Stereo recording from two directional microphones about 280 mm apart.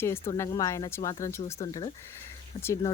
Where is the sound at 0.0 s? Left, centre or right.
Centre.